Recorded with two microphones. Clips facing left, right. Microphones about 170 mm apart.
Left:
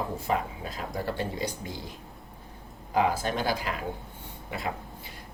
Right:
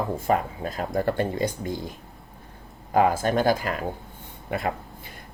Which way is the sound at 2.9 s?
50° right (ahead or behind).